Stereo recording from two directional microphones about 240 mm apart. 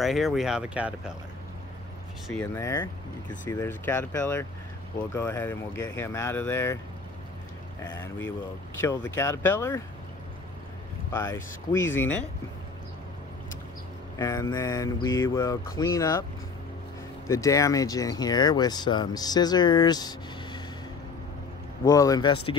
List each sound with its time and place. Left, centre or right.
0.0 s speech: centre
2.2 s speech: centre
7.8 s speech: centre
11.1 s speech: centre
14.1 s speech: centre
17.3 s speech: centre
21.8 s speech: centre